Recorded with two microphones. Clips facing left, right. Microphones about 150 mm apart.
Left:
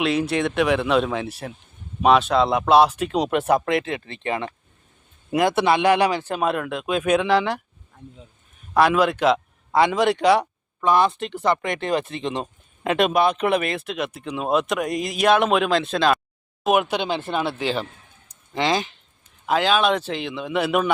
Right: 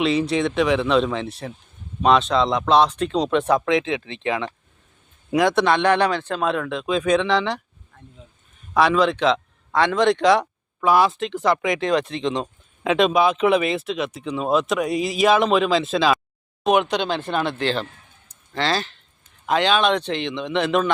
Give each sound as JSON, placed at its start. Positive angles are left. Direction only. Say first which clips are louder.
{"t": 0.0, "sound": "a man's voice", "louder": "right 1 dB", "side_deg": 0}
{"t": 8.7, "sound": "a man's voice", "louder": "even", "side_deg": 5}
{"t": 19.5, "sound": "speech", "louder": "right 1 dB", "side_deg": 5}